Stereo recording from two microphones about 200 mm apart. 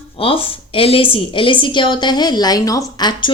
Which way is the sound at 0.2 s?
25° left (ahead or behind).